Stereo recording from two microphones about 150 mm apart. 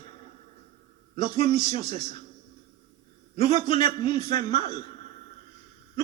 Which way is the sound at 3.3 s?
35° left (ahead or behind).